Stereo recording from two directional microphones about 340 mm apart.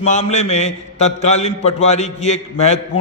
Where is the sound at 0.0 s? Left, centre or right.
Centre.